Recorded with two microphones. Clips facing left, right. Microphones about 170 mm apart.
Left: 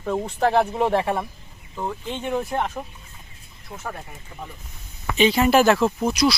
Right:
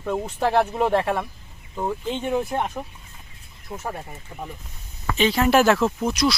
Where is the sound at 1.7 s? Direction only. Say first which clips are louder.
Right 3 dB; 15° right (ahead or behind).